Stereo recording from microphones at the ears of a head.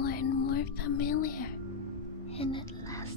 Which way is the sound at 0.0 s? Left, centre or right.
Left.